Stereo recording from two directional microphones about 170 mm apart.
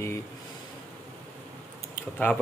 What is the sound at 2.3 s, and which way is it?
Speech, 10° left (ahead or behind).